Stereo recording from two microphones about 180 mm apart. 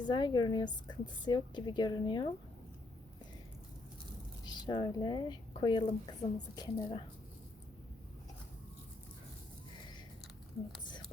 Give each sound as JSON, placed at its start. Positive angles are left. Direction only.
{"t": 0.0, "sound": "a woman's voice", "side_deg": 25}
{"t": 4.6, "sound": "a woman's voice", "side_deg": 25}